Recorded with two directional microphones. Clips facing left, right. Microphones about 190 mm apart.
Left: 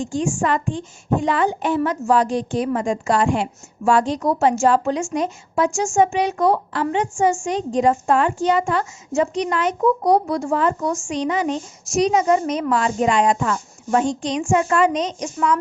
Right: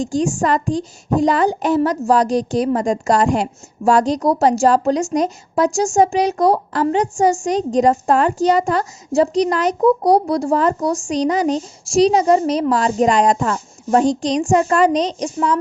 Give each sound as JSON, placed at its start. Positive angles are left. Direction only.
{"t": 0.0, "sound": "a woman's voice", "side_deg": -40}